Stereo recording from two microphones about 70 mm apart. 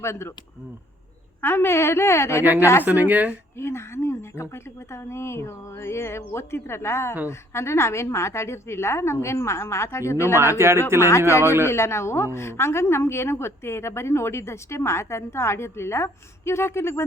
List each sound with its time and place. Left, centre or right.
0.0 s a woman's voice: left
1.4 s a woman's voice: left
2.4 s a woman's voice: right
3.6 s a woman's voice: left
10.6 s speech: right
11.6 s a woman's voice: left